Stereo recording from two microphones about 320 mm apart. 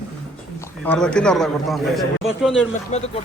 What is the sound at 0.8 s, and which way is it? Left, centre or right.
A man's voice, centre.